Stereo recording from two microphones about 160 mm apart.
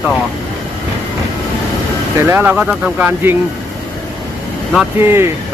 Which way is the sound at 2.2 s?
15° right (ahead or behind).